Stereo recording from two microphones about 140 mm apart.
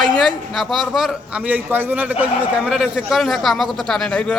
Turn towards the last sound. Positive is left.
turn(degrees=5)  # may be behind; listen again after turning